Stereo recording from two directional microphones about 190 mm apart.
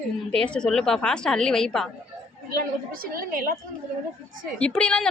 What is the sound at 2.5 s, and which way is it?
A woman's voice, 50° right (ahead or behind).